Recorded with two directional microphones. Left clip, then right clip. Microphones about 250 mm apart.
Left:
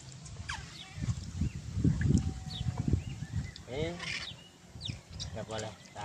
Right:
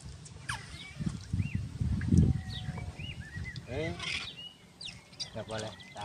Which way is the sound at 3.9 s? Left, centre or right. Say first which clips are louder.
Right 2 dB; centre.